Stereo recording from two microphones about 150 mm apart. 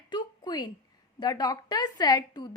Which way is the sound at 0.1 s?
30° left (ahead or behind).